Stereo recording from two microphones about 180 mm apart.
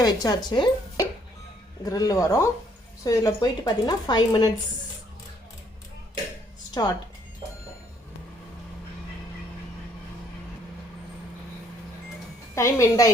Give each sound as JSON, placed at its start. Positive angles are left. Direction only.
{"t": 0.0, "sound": "speech", "side_deg": 20}
{"t": 12.5, "sound": "a woman's voice", "side_deg": 15}